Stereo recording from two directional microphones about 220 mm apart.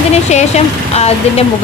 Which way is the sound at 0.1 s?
30° left (ahead or behind).